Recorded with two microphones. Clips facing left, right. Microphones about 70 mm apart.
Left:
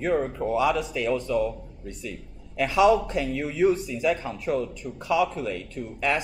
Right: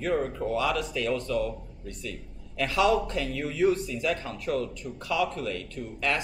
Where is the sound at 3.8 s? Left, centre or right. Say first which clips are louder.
Left 4 dB; centre.